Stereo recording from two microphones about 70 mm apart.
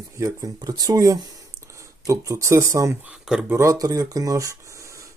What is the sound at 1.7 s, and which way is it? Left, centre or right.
Speech, right.